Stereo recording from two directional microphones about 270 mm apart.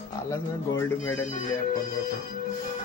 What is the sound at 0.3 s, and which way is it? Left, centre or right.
Speech, centre.